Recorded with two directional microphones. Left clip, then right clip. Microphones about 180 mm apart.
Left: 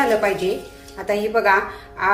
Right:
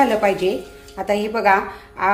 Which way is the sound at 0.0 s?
30° right (ahead or behind).